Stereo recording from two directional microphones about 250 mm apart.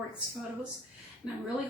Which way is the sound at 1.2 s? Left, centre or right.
Centre.